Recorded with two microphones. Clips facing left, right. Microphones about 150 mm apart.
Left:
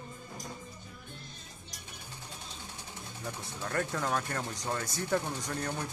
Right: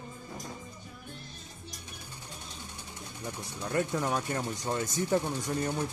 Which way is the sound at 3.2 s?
15° right (ahead or behind).